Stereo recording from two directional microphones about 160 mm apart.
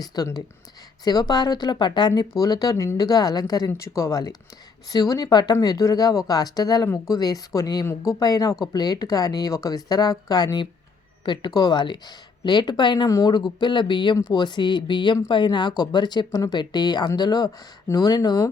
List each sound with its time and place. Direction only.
0.0 s speech: 25° left (ahead or behind)